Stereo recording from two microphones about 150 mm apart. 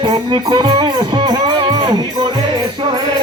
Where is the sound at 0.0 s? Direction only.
30° right (ahead or behind).